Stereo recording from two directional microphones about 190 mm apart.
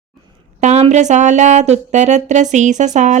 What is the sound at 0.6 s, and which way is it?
Speech, 35° right (ahead or behind).